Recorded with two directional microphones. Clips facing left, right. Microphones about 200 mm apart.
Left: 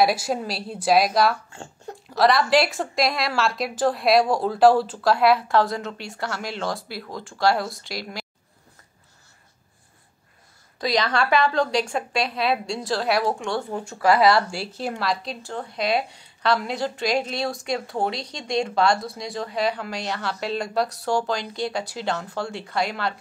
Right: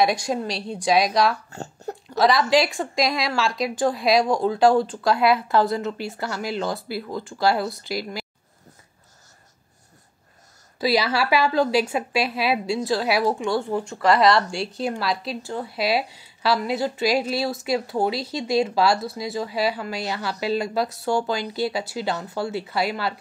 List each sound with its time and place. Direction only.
0.0 s speech: 5° left (ahead or behind)
1.5 s a sound: 40° right (ahead or behind)
2.0 s speech: centre (ahead or behind)
10.8 s speech: 5° right (ahead or behind)